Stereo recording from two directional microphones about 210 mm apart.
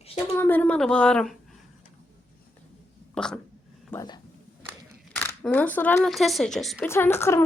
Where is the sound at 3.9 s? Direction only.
20° left (ahead or behind).